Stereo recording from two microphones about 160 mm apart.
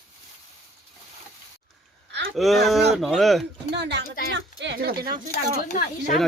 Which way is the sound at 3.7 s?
90° right.